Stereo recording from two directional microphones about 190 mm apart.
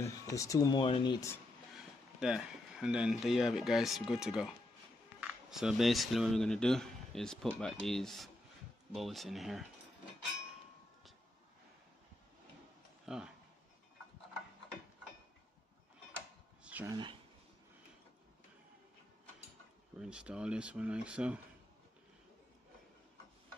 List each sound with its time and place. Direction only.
0.0 s speech: 15° left (ahead or behind)
2.1 s speech: 5° right (ahead or behind)
13.0 s speech: 5° right (ahead or behind)
16.6 s a sound: 10° right (ahead or behind)
16.9 s speech: 25° right (ahead or behind)
20.0 s speech: 5° right (ahead or behind)